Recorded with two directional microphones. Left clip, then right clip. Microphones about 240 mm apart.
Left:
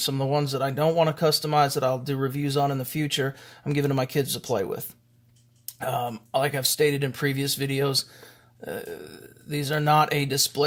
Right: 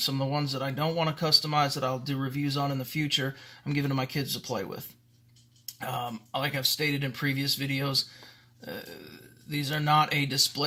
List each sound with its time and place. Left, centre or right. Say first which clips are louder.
0.0 s speech: left 4 dB; left